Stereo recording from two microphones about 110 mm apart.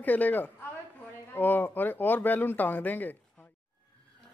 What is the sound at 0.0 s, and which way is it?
Speech, 15° left (ahead or behind).